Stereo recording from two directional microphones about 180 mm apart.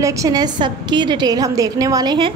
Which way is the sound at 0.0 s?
20° right (ahead or behind).